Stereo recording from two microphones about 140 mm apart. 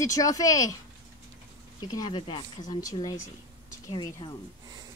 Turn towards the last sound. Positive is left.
turn(degrees=30)  # may be behind; listen again after turning